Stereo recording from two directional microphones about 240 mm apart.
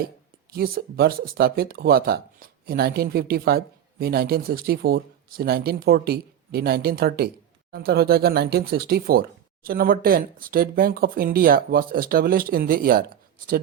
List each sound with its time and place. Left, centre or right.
0.5 s speech: right